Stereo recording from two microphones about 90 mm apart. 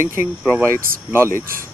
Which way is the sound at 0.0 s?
25° right (ahead or behind).